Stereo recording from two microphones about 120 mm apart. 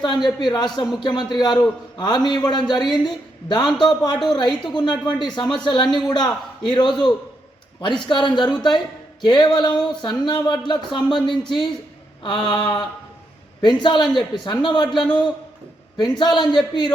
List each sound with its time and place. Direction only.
0.0 s a man's voice: 40° left (ahead or behind)
12.2 s a man's voice: 40° left (ahead or behind)
13.6 s a man's voice: 40° left (ahead or behind)
14.9 s a man's voice: 5° left (ahead or behind)
16.0 s a man's voice: 40° left (ahead or behind)